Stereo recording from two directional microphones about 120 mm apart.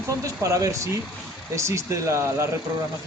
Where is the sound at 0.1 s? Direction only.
25° right (ahead or behind).